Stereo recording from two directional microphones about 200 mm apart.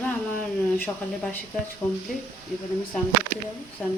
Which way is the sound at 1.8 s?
10° left (ahead or behind).